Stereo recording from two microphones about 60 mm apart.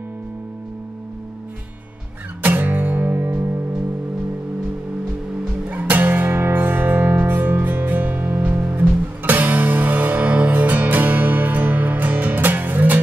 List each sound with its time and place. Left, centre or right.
2.4 s music: right
5.7 s music: right